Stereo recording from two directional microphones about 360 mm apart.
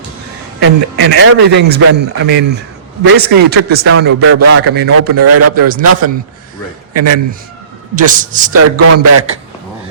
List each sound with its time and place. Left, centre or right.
0.6 s a man's voice: right
4.0 s a man's voice: right
4.7 s a man's voice: right
5.1 s a man's voice: right
7.9 s a man's voice: right
8.5 s a man's voice: right